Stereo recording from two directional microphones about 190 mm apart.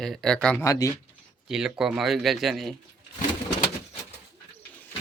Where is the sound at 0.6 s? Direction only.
20° left (ahead or behind).